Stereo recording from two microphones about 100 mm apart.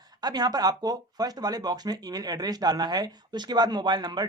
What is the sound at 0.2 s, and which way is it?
Speech, 40° right (ahead or behind).